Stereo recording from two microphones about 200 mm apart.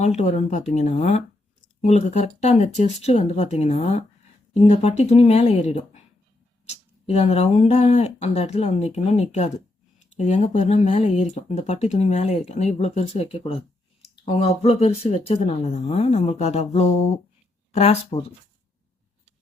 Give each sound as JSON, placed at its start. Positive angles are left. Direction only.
{"t": 0.0, "sound": "speech", "side_deg": 35}